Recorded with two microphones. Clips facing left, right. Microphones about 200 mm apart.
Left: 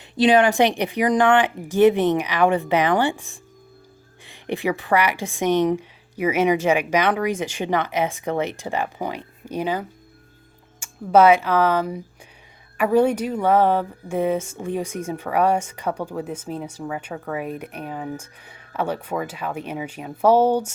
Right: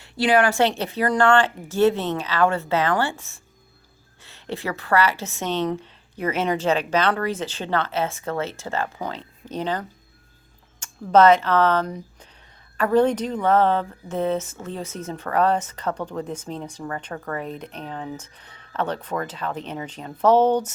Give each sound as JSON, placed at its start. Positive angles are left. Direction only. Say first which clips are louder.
{"t": 0.0, "sound": "speech", "louder": "left 3 dB", "side_deg": 20}